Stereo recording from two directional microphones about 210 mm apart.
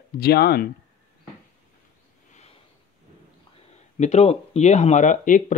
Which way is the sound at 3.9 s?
30° left (ahead or behind).